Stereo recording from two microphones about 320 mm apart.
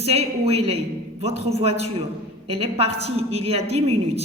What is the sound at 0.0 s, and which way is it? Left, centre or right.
A woman's voice, centre.